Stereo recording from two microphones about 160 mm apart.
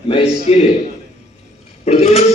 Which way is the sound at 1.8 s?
40° left (ahead or behind).